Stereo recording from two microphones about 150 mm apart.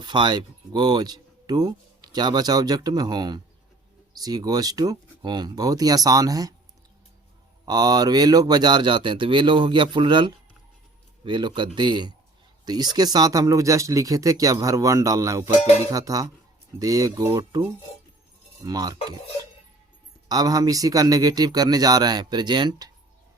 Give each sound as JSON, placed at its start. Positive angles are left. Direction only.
{"t": 0.0, "sound": "speech", "side_deg": -30}
{"t": 7.6, "sound": "speech", "side_deg": -25}
{"t": 20.2, "sound": "speech", "side_deg": -25}